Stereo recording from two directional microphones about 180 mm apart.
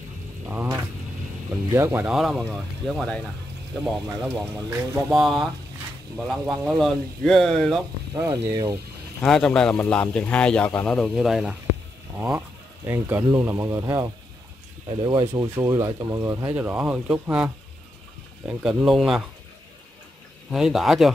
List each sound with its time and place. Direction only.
0.5 s speech: 10° right (ahead or behind)
4.3 s speech: 15° right (ahead or behind)
5.1 s speech: centre (ahead or behind)
8.1 s speech: 20° right (ahead or behind)
9.2 s speech: 5° left (ahead or behind)
12.2 s speech: 15° right (ahead or behind)
15.4 s speech: 15° right (ahead or behind)
16.5 s speech: 5° right (ahead or behind)
20.5 s speech: centre (ahead or behind)